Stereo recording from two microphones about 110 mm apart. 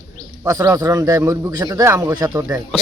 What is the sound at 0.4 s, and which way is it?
Speech, 30° right (ahead or behind).